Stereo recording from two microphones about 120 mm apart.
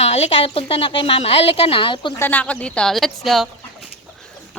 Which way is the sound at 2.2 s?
10° left (ahead or behind).